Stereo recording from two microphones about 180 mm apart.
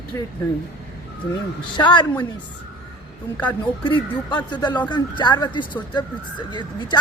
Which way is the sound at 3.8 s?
25° left (ahead or behind).